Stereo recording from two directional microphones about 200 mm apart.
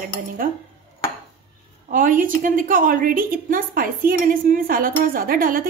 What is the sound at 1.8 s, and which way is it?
A woman's voice, 40° right (ahead or behind).